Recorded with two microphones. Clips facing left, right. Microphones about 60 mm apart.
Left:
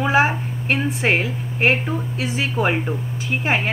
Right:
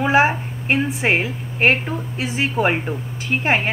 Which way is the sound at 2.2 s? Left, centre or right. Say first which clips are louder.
Right 3 dB; right.